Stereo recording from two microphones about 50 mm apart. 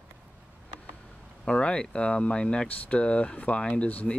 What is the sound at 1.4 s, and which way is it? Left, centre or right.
Speech, centre.